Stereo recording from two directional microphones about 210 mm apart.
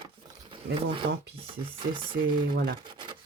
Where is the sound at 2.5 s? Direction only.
45° right (ahead or behind).